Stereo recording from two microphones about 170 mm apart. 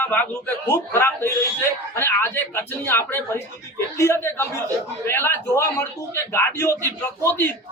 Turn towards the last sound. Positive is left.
turn(degrees=15)  # may be behind; listen again after turning